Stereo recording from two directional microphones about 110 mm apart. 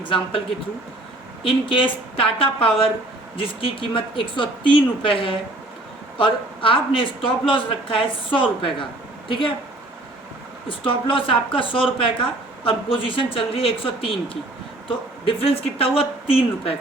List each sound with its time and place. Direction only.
0.0 s speech: 50° left (ahead or behind)
1.5 s speech: 50° left (ahead or behind)
10.7 s speech: 55° left (ahead or behind)